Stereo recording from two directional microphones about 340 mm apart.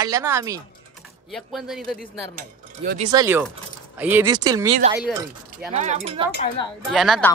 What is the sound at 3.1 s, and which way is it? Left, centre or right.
Speech, centre.